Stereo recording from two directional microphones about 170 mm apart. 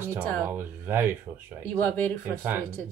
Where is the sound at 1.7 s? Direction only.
10° left (ahead or behind).